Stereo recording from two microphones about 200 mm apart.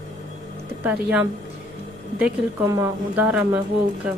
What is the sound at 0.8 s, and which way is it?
Speech, 5° right (ahead or behind).